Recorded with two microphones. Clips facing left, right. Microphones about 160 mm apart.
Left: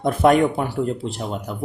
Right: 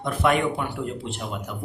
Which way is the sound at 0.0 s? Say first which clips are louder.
Left 6 dB; 40° left (ahead or behind).